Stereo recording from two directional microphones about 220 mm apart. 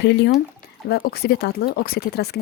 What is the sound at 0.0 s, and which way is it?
Speech, 50° left (ahead or behind).